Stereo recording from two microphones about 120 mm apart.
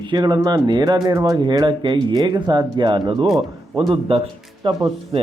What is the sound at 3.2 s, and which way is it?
Speech, centre (ahead or behind).